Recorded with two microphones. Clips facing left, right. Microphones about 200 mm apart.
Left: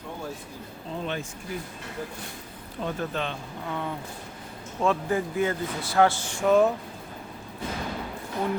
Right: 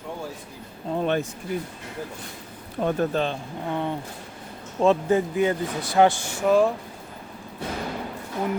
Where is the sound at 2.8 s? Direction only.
40° right (ahead or behind); by 6.1 s 15° right (ahead or behind).